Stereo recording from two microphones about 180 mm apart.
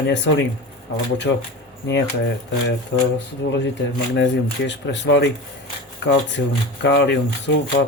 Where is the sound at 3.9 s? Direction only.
75° left (ahead or behind).